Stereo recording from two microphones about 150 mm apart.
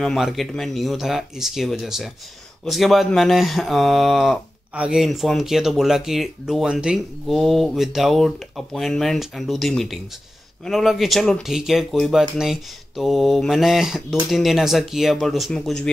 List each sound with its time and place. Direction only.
0.0 s speech: centre (ahead or behind)